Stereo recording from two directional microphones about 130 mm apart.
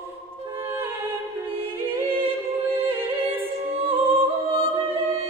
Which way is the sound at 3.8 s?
45° right (ahead or behind).